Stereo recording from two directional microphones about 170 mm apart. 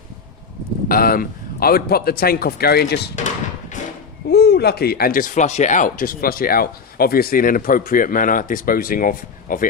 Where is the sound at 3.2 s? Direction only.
45° left (ahead or behind).